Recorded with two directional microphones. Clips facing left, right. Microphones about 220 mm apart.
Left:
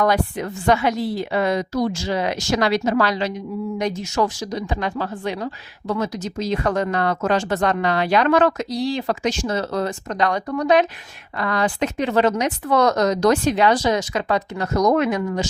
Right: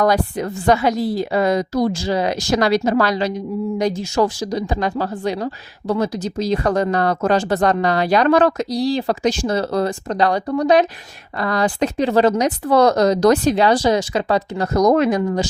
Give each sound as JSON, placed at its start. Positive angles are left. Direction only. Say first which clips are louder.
{"t": 0.0, "sound": "a woman's voice", "louder": "right 2 dB", "side_deg": -35}